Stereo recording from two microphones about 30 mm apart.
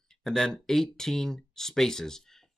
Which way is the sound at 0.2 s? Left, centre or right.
Centre.